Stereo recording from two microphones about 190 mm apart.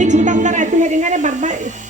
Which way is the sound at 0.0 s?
40° right (ahead or behind).